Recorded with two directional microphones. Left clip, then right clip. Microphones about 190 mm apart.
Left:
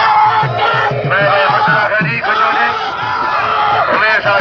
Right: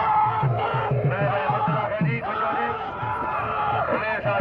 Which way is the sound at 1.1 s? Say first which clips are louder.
Left 16 dB; 35° right (ahead or behind).